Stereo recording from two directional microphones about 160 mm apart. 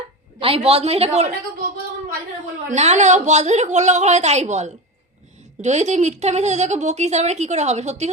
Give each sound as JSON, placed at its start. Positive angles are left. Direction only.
{"t": 0.3, "sound": "a woman's voice", "side_deg": -35}
{"t": 2.6, "sound": "speech", "side_deg": -45}